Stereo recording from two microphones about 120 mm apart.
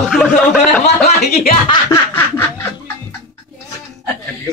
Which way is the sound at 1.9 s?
20° left (ahead or behind).